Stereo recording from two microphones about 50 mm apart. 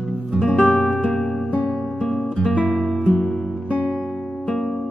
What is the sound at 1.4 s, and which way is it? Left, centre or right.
Music, left.